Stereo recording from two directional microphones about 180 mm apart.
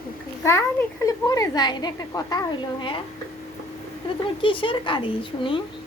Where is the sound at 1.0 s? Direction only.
20° left (ahead or behind).